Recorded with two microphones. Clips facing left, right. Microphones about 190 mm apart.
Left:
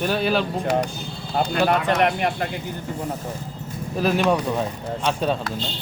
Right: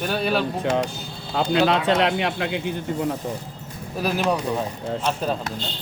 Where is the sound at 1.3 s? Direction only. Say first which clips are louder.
Right 1 dB; 90° right.